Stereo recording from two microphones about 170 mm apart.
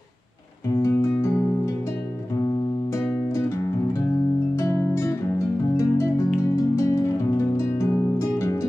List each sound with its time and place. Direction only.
0.7 s music: 15° left (ahead or behind)
2.9 s music: 15° left (ahead or behind)